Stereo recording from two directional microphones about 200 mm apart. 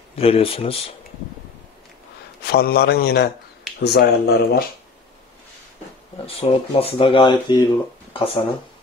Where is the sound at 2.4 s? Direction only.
55° left (ahead or behind).